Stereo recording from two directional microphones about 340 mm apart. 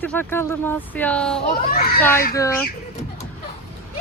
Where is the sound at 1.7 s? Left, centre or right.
Left.